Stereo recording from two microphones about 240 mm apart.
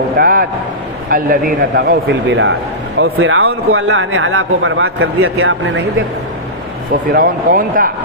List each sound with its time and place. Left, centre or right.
0.2 s a sound: right
1.1 s a man's voice: right
7.1 s a man's voice: right